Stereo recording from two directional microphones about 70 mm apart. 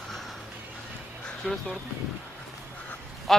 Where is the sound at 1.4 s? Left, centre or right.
Centre.